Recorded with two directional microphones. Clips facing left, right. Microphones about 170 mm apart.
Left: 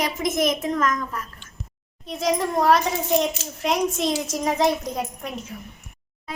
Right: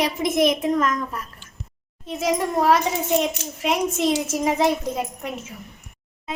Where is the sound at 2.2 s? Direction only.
5° right (ahead or behind).